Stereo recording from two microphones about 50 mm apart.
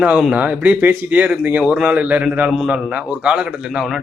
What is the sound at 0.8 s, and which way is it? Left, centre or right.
A man's voice, right.